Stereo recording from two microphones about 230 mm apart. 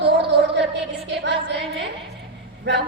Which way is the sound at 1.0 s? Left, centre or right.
Right.